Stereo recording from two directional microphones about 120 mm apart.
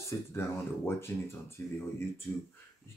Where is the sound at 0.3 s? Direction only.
20° left (ahead or behind).